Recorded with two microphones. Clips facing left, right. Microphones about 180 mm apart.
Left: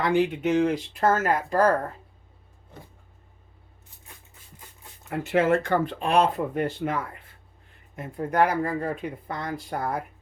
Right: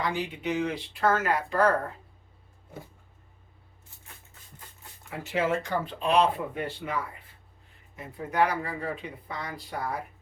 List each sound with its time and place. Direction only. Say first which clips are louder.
0.0 s speech: left 8 dB; 60° left (ahead or behind); by 1.6 s 40° left (ahead or behind)
5.0 s speech: left 6 dB; 55° left (ahead or behind)